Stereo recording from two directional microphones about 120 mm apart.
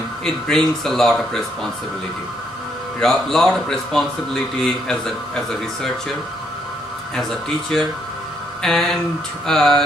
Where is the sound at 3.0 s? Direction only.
5° left (ahead or behind).